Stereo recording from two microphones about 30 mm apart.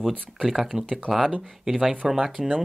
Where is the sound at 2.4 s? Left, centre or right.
Right.